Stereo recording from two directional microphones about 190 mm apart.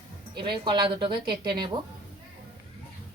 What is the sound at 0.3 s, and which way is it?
A woman's voice, 25° right (ahead or behind).